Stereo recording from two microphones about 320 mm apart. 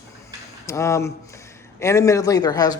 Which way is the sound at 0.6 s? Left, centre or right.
Centre.